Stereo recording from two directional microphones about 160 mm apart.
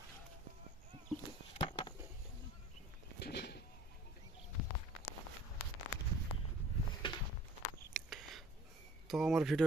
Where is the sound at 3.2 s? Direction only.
85° left.